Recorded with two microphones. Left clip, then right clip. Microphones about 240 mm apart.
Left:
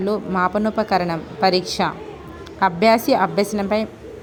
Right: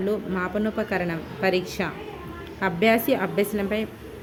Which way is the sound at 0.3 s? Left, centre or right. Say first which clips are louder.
Left 7 dB; centre.